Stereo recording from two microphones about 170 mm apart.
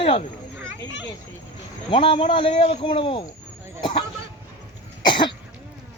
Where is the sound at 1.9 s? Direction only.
30° left (ahead or behind).